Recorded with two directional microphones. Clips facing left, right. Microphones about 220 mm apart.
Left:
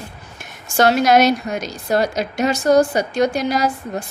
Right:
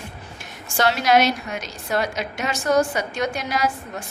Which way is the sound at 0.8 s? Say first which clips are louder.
Left 5 dB; 45° left (ahead or behind).